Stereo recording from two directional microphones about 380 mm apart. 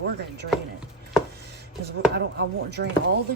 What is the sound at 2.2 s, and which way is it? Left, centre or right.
Speech, right.